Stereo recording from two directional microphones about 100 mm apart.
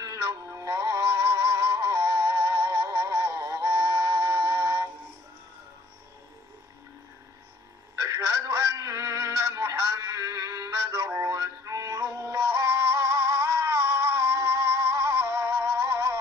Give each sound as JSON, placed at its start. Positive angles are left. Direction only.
{"t": 0.0, "sound": "music", "side_deg": -35}
{"t": 8.0, "sound": "synthetic singing", "side_deg": -30}